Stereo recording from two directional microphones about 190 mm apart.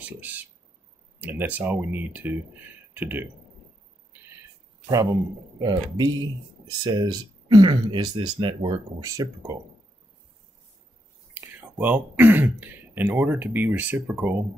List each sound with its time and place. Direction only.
0.0 s speech: 10° right (ahead or behind)
5.6 s speech: 20° right (ahead or behind)
11.4 s speech: 10° right (ahead or behind)